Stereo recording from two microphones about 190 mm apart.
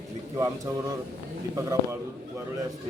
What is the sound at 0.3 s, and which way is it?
Speech, 15° right (ahead or behind).